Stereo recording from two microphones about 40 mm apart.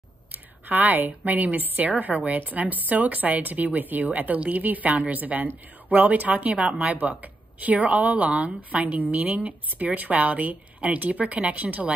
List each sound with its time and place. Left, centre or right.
0.7 s a woman's voice: right
6.7 s speech: right
7.0 s a woman's voice: right